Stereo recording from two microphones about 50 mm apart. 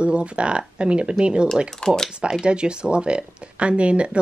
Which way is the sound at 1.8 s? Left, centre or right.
Centre.